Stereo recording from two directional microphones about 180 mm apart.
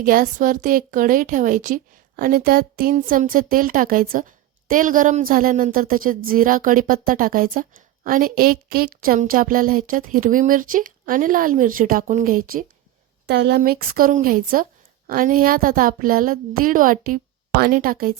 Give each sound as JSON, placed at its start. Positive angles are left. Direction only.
{"t": 0.0, "sound": "a woman's voice", "side_deg": -50}
{"t": 13.2, "sound": "a woman's voice", "side_deg": -65}